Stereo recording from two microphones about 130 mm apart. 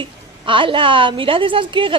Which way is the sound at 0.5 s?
40° right (ahead or behind).